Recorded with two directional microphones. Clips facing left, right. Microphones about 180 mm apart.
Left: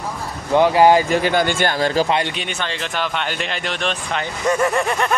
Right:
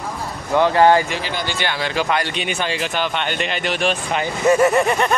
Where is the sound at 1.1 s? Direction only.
45° left (ahead or behind).